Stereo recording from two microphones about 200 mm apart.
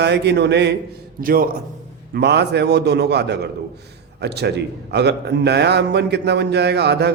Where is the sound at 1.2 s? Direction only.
45° right (ahead or behind).